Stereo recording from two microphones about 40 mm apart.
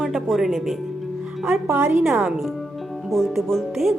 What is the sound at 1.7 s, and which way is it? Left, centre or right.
Speech, right.